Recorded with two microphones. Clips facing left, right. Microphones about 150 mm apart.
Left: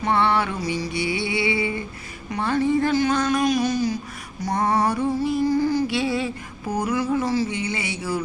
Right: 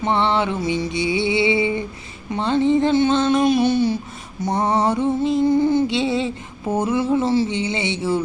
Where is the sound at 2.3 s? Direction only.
20° right (ahead or behind).